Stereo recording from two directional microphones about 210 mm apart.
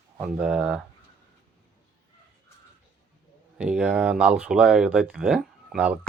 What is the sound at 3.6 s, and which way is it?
Speech, 5° right (ahead or behind).